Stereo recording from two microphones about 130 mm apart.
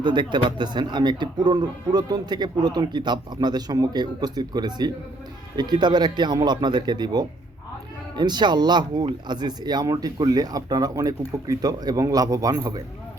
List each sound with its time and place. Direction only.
0.0 s speech: 35° right (ahead or behind)